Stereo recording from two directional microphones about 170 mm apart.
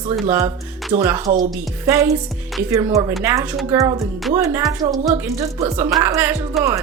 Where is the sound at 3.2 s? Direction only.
15° right (ahead or behind).